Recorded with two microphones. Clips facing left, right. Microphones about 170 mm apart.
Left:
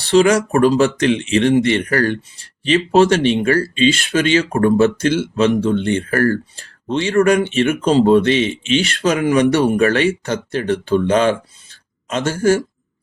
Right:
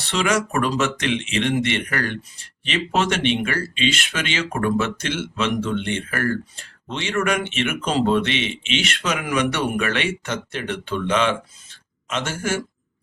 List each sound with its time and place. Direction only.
0.0 s speech: 35° left (ahead or behind)